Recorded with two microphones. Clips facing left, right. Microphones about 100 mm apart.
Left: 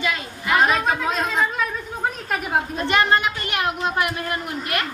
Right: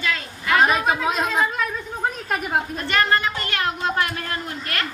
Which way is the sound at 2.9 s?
20° left (ahead or behind).